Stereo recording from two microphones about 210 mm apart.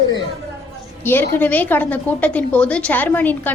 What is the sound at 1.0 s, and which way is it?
A woman's voice, 10° left (ahead or behind).